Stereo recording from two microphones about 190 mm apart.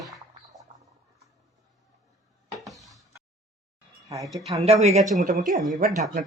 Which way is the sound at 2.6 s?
Centre (ahead or behind).